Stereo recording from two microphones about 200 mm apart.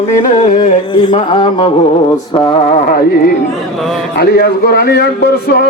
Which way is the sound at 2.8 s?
45° left (ahead or behind).